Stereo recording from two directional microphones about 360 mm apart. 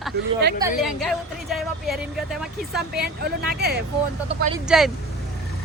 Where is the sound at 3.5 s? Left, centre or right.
Right.